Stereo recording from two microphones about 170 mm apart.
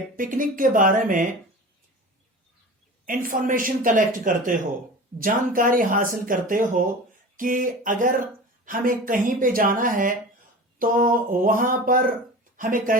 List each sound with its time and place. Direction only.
0.2 s speech: 55° right (ahead or behind)
3.1 s speech: 55° right (ahead or behind)
10.8 s a sound: 55° right (ahead or behind)
12.5 s speech: 55° right (ahead or behind)